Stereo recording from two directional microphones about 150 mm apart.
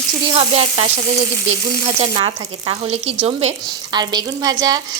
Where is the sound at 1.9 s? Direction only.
35° right (ahead or behind).